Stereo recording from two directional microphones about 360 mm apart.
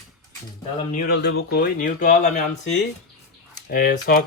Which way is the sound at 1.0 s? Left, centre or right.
Left.